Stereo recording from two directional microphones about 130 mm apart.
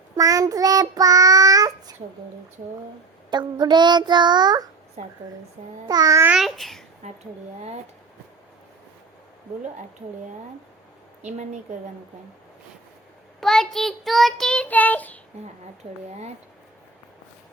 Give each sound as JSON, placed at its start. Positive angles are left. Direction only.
{"t": 0.2, "sound": "child singing", "side_deg": -25}
{"t": 3.3, "sound": "child singing", "side_deg": -35}
{"t": 5.8, "sound": "a child's voice", "side_deg": -30}
{"t": 6.2, "sound": "a child's voice", "side_deg": -5}
{"t": 7.0, "sound": "speech", "side_deg": -60}
{"t": 11.2, "sound": "a woman's voice", "side_deg": -65}
{"t": 13.4, "sound": "child singing", "side_deg": 5}